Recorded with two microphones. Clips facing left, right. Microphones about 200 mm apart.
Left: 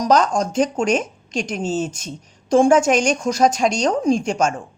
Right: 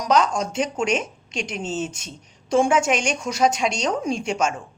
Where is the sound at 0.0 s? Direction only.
40° left (ahead or behind).